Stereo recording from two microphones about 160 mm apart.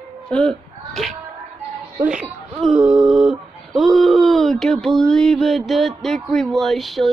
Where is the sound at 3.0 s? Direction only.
5° right (ahead or behind).